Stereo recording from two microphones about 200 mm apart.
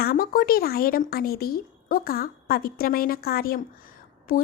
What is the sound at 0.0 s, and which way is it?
A woman's voice, 50° left (ahead or behind).